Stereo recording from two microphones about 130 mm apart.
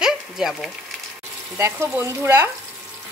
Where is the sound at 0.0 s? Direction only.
Centre (ahead or behind).